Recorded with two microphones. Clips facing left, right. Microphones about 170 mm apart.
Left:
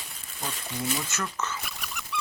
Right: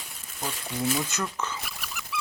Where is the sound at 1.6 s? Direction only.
Centre (ahead or behind).